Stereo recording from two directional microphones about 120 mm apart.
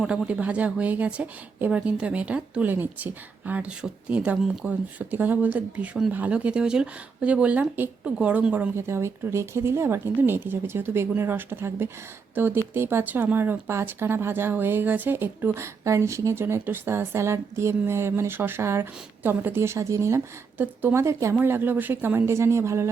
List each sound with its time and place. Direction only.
0.0 s a woman's voice: 5° right (ahead or behind)
8.7 s a woman's voice: 20° right (ahead or behind)